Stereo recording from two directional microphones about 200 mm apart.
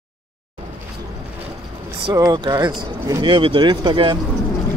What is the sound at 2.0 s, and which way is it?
Speech, 20° right (ahead or behind).